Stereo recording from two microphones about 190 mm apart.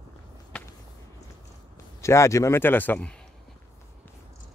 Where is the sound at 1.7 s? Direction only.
15° left (ahead or behind).